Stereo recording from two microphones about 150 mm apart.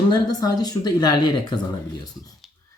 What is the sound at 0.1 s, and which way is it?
Speech, 25° left (ahead or behind).